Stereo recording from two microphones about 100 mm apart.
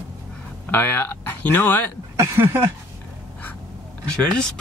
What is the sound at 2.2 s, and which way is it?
Speech, 25° right (ahead or behind).